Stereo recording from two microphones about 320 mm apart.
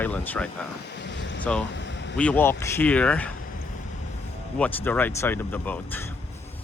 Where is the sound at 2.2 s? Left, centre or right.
Centre.